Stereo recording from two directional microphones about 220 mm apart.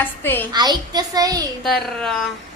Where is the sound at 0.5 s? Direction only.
20° right (ahead or behind).